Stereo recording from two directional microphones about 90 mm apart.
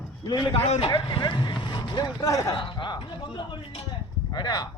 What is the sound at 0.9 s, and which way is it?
Speech, 70° left (ahead or behind).